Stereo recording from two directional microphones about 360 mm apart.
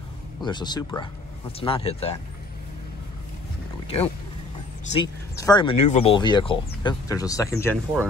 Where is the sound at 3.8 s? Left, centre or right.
Centre.